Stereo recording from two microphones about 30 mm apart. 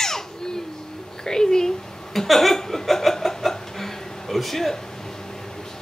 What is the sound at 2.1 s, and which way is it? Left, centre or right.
Speech, centre.